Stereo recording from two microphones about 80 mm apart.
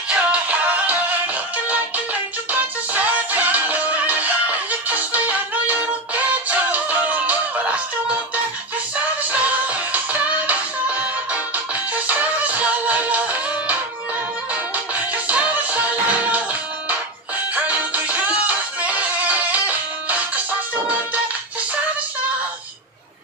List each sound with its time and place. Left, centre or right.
0.1 s music: centre
15.2 s music: centre
17.6 s music: centre